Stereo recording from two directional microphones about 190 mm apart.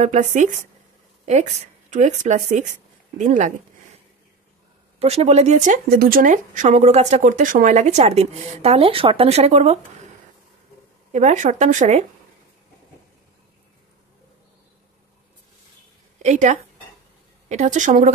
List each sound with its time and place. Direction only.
0.0 s a woman's voice: 40° right (ahead or behind)
4.9 s speech: 35° right (ahead or behind)
11.1 s speech: 40° right (ahead or behind)
16.2 s a woman's voice: 40° right (ahead or behind)